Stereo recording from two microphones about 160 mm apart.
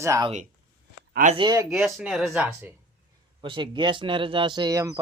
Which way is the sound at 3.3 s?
30° right (ahead or behind).